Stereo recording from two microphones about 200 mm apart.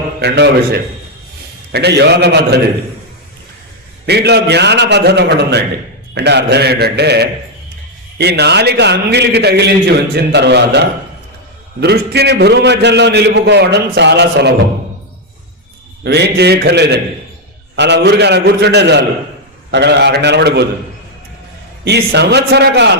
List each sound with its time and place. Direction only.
0.2 s a man's voice: 55° right (ahead or behind)
4.0 s a man's voice: 55° right (ahead or behind)
16.0 s a man's voice: 55° right (ahead or behind)
21.8 s a man's voice: 55° right (ahead or behind)